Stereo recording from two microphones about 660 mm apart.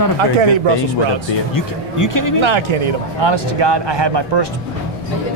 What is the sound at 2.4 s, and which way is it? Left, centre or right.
Speech, right.